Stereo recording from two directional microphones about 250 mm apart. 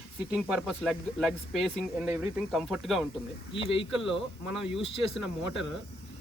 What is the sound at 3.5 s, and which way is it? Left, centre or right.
Speech, left.